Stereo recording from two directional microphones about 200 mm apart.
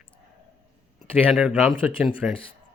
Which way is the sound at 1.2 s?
5° right (ahead or behind).